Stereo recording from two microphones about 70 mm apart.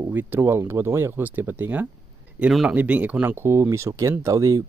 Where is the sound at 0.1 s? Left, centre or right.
Right.